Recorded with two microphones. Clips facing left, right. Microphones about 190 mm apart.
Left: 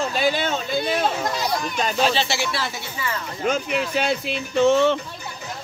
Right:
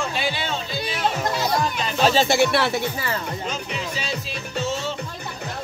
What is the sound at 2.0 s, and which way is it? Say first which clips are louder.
Speech: right 6 dB; 40° right (ahead or behind).